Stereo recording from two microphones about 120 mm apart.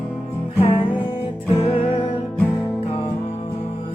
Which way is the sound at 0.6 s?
50° left (ahead or behind).